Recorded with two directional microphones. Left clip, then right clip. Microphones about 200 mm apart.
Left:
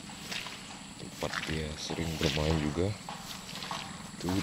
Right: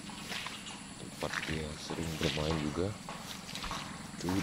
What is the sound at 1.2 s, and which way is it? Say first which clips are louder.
Speech: left 2 dB; 15° left (ahead or behind).